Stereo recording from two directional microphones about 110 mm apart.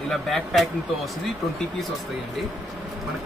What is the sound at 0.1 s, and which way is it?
Speech, centre (ahead or behind).